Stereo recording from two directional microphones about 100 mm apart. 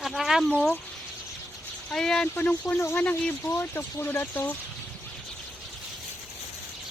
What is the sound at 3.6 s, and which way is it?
Speech, 25° left (ahead or behind).